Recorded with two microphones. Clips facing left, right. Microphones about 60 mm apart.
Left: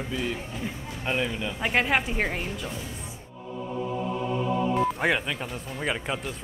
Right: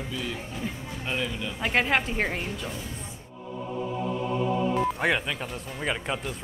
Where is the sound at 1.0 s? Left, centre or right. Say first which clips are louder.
Left 3 dB; left.